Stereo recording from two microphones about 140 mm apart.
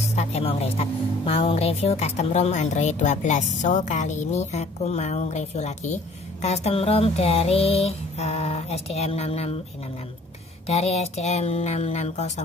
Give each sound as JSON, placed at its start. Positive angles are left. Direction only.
{"t": 0.1, "sound": "a woman's voice", "side_deg": 50}
{"t": 10.7, "sound": "a woman's voice", "side_deg": 50}